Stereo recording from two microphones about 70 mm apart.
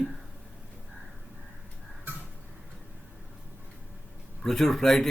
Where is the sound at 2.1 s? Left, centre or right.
Right.